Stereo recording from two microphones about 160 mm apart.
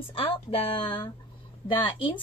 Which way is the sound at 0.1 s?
35° left (ahead or behind).